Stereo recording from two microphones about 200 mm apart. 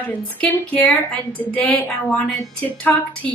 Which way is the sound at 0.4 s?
5° left (ahead or behind).